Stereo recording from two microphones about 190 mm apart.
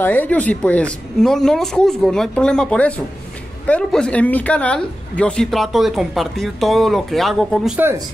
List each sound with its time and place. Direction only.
0.0 s speech: 10° left (ahead or behind)
7.7 s speech: 10° right (ahead or behind)